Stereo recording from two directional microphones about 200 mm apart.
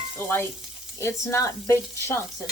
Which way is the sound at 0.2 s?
10° left (ahead or behind).